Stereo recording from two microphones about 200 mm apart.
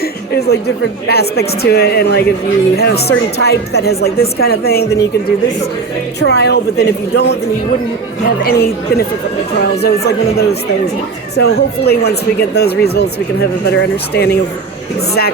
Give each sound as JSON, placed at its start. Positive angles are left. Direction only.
{"t": 0.0, "sound": "a sound", "side_deg": 55}
{"t": 1.0, "sound": "a woman's voice", "side_deg": 55}
{"t": 6.1, "sound": "a woman's voice", "side_deg": 55}
{"t": 8.4, "sound": "a woman's voice", "side_deg": 50}